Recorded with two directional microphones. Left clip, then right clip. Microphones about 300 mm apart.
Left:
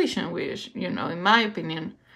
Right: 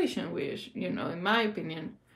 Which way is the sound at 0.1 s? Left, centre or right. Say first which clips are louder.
Left 5 dB; left.